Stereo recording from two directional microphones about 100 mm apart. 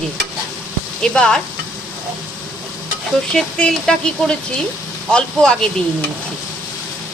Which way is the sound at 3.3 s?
10° left (ahead or behind).